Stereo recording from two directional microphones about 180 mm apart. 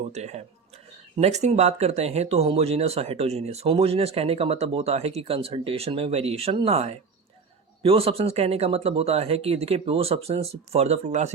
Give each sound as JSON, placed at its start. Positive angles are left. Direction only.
{"t": 0.1, "sound": "speech", "side_deg": -40}